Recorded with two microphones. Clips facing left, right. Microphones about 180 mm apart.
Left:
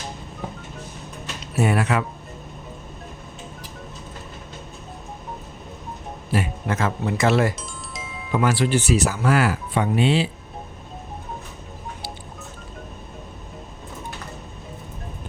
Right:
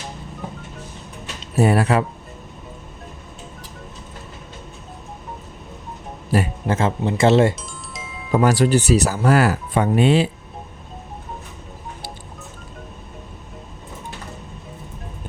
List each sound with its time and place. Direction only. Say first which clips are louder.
1.5 s speech: right 4 dB; 35° right (ahead or behind)
6.3 s speech: right 4 dB; 35° right (ahead or behind)
7.5 s music: even; centre (ahead or behind)
8.3 s speech: right 4 dB; 40° right (ahead or behind)